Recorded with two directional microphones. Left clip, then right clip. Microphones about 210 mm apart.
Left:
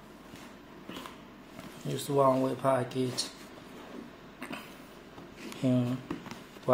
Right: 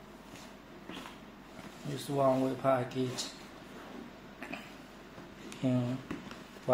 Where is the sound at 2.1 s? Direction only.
25° left (ahead or behind).